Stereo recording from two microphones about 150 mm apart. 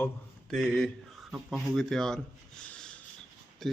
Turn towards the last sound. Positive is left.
turn(degrees=0)  # may be behind; listen again after turning